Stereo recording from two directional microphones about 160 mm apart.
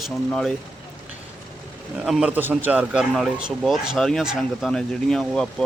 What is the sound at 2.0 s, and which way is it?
A man's voice, 5° right (ahead or behind).